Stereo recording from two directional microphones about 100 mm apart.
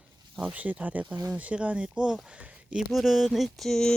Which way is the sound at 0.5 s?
15° right (ahead or behind).